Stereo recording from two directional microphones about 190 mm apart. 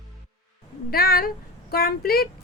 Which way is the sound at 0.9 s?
50° left (ahead or behind).